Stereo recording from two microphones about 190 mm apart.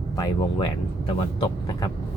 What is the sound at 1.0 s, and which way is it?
Speech, 25° left (ahead or behind).